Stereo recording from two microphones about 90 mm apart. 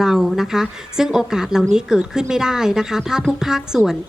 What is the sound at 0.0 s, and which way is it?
Speech, 5° right (ahead or behind).